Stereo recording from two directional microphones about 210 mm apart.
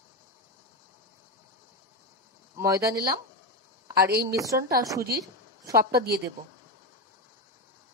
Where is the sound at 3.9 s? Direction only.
45° right (ahead or behind).